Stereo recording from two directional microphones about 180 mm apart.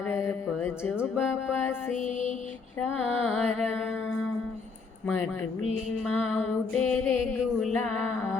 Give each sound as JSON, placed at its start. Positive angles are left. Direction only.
{"t": 0.1, "sound": "music", "side_deg": 10}
{"t": 2.0, "sound": "music", "side_deg": 45}
{"t": 2.8, "sound": "music", "side_deg": 0}
{"t": 6.1, "sound": "music", "side_deg": 0}